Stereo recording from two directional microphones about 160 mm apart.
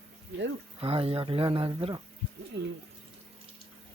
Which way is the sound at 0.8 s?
35° right (ahead or behind).